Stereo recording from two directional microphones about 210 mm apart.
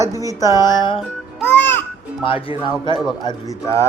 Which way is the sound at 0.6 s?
20° left (ahead or behind).